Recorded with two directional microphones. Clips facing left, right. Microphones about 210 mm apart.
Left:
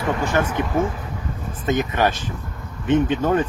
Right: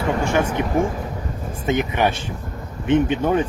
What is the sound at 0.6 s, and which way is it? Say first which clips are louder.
Speech: right 1 dB; 15° right (ahead or behind).